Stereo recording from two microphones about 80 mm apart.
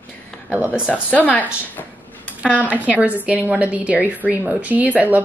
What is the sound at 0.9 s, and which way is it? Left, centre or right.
Speech, centre.